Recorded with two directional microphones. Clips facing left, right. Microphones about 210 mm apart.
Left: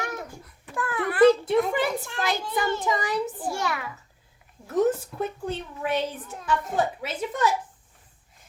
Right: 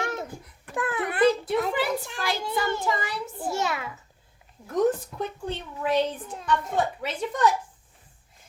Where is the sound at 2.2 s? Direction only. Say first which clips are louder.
Left 3 dB; 20° left (ahead or behind).